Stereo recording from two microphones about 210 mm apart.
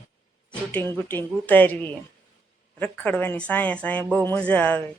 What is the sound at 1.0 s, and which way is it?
Speech, 10° left (ahead or behind).